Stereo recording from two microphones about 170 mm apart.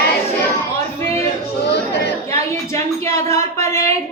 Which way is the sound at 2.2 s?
15° left (ahead or behind).